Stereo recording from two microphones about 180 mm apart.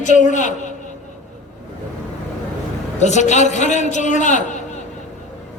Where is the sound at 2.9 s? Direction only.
40° left (ahead or behind).